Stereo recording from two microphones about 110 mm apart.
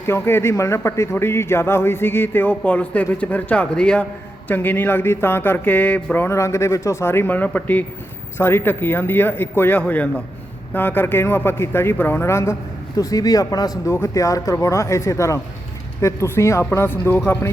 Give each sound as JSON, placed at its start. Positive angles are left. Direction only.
{"t": 0.1, "sound": "a man's voice", "side_deg": 20}
{"t": 6.2, "sound": "a man's voice", "side_deg": 25}